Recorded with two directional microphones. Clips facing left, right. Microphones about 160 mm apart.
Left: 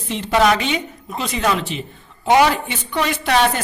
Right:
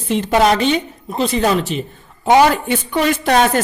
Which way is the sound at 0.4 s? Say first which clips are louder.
Right 3 dB; 35° right (ahead or behind).